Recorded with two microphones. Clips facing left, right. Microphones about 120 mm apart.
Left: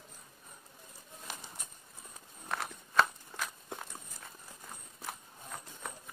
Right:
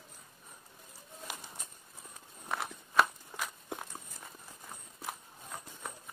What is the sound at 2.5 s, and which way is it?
Walk, 10° right (ahead or behind).